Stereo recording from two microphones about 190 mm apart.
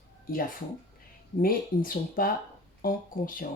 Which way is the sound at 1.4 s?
50° left (ahead or behind).